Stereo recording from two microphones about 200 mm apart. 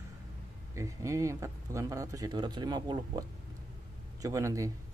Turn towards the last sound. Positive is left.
turn(degrees=-15)  # may be behind; listen again after turning